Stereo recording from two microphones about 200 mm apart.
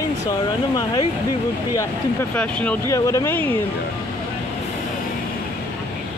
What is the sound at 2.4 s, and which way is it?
Speech, 5° left (ahead or behind).